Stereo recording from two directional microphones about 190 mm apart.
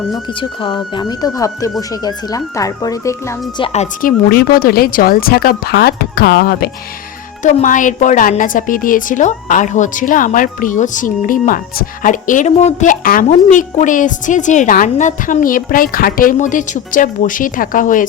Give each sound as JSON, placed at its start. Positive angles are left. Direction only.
{"t": 0.3, "sound": "speech", "side_deg": 25}
{"t": 3.6, "sound": "a woman's voice", "side_deg": 35}
{"t": 4.3, "sound": "a woman's voice", "side_deg": 50}
{"t": 7.4, "sound": "a woman's voice", "side_deg": 40}